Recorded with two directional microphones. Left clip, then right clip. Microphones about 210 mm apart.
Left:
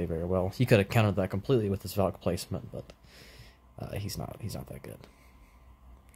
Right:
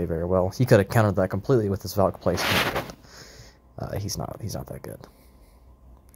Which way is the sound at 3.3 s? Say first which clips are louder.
Right 8 dB; 15° right (ahead or behind).